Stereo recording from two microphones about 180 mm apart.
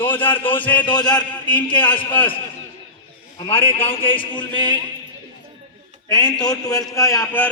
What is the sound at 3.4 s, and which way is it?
A man's voice, 30° left (ahead or behind).